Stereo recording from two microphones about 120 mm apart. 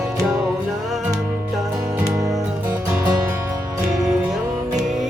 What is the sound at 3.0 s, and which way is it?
Music, 25° right (ahead or behind).